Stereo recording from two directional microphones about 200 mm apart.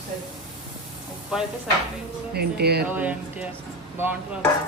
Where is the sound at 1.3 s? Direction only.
5° right (ahead or behind).